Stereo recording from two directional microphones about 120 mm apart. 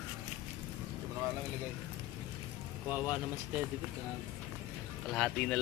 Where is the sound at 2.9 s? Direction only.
10° right (ahead or behind).